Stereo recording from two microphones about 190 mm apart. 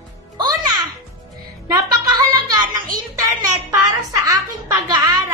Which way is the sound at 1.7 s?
20° right (ahead or behind).